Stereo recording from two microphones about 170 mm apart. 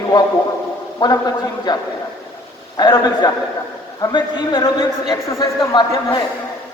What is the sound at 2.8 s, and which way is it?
A man's voice, 25° left (ahead or behind).